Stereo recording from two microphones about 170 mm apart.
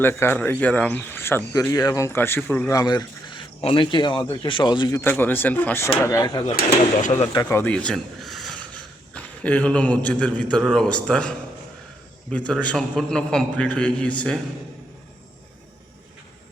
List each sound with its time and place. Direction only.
0.0 s speech: 15° left (ahead or behind)
6.1 s speech: 20° left (ahead or behind)
6.6 s speech: 45° left (ahead or behind)
7.4 s speech: 10° left (ahead or behind)
12.5 s a man's voice: 5° left (ahead or behind)